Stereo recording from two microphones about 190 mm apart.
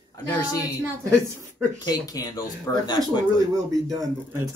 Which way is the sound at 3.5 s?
20° right (ahead or behind).